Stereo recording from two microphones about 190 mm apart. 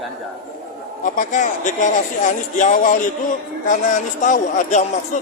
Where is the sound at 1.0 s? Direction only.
40° left (ahead or behind).